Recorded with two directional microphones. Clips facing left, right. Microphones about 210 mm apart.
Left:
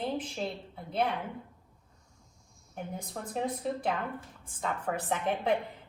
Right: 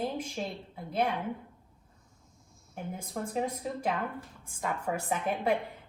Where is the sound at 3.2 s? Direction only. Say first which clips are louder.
Right 6 dB; 5° right (ahead or behind).